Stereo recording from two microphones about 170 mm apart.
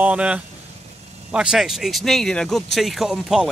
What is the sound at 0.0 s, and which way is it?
Speech, 5° right (ahead or behind).